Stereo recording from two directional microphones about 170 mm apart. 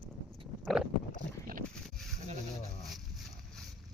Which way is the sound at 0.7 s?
Centre (ahead or behind).